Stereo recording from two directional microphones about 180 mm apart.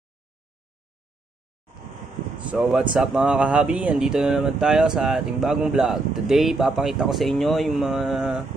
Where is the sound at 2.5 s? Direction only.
5° right (ahead or behind).